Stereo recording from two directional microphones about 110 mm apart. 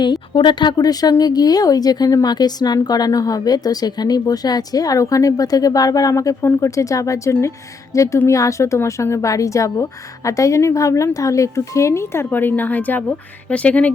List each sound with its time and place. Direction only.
0.0 s a woman's voice: 45° left (ahead or behind); by 13.9 s 10° left (ahead or behind)